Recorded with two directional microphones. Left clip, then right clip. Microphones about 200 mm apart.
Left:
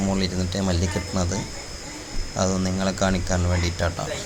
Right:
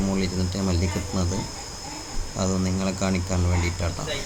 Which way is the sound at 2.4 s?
5° left (ahead or behind).